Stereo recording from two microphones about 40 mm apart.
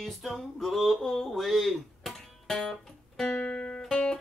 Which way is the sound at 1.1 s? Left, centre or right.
Centre.